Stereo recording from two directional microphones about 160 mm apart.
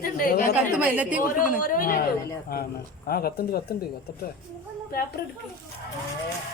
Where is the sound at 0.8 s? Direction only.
10° right (ahead or behind).